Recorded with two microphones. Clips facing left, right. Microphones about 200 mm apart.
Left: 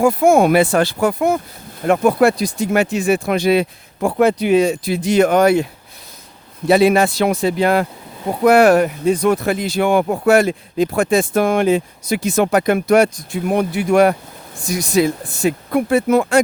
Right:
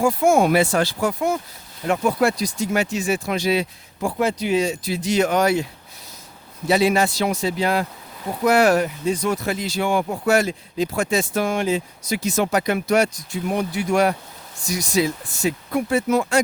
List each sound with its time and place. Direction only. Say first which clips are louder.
0.0 s speech: left 4 dB; 55° left (ahead or behind)
6.7 s speech: left 6 dB; 55° left (ahead or behind)